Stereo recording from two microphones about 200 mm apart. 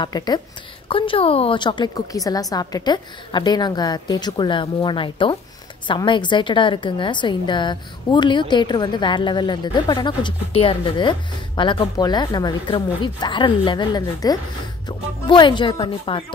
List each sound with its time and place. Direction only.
0.0 s a woman's voice: 20° left (ahead or behind)